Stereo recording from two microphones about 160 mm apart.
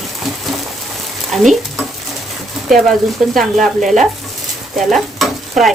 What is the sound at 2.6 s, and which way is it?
Speech, centre (ahead or behind).